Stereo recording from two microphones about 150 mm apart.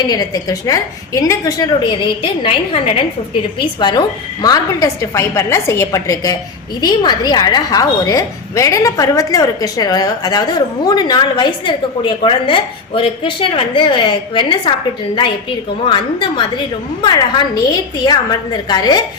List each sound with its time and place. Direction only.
0.0 s a woman's voice: 25° left (ahead or behind)
15.9 s a woman's voice: 30° left (ahead or behind)